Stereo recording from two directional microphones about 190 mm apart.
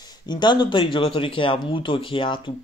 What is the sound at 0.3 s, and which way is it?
Speech, 25° left (ahead or behind).